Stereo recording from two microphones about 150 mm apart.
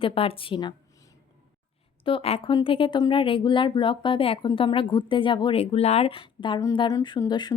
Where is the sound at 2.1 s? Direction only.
40° left (ahead or behind).